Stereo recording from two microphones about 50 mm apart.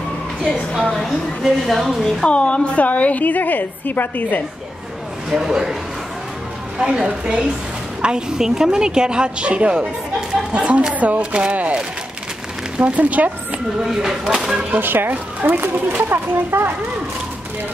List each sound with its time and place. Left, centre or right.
0.7 s a woman's voice: centre
1.4 s speech: centre
2.2 s a woman's voice: left
5.3 s a woman's voice: centre
6.8 s a woman's voice: centre; by 13.3 s right
13.9 s a woman's voice: centre
14.8 s speech: right